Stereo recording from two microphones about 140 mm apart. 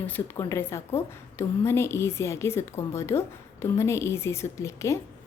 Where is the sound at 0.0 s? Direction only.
20° left (ahead or behind).